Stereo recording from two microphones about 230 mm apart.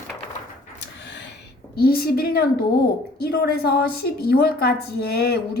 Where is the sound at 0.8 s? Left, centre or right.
Left.